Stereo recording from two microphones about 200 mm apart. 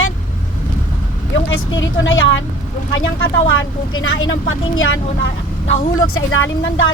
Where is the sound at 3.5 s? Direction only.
90° left.